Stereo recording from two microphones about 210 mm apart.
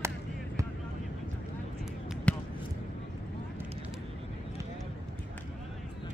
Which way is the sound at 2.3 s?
5° left (ahead or behind).